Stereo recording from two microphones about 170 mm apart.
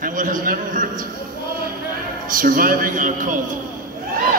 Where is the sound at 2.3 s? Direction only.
55° right (ahead or behind).